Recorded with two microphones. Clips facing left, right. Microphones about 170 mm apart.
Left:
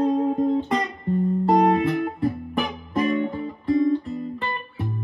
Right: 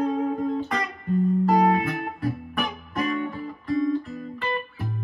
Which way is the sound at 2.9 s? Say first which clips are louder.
Left 5 dB; 25° left (ahead or behind).